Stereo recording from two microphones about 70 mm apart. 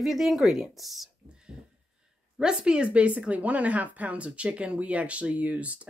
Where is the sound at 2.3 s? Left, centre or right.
Centre.